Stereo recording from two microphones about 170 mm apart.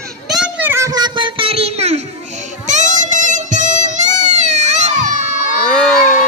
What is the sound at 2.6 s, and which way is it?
Music, 45° right (ahead or behind).